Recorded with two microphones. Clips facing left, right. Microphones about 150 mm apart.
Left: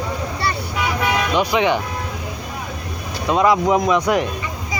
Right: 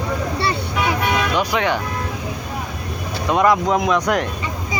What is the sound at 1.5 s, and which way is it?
Speech, 15° left (ahead or behind).